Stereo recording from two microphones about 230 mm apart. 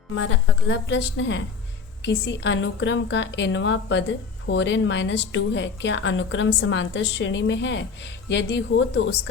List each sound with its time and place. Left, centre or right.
0.2 s a woman's voice: left